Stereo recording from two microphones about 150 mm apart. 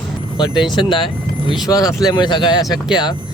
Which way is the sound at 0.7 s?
35° left (ahead or behind).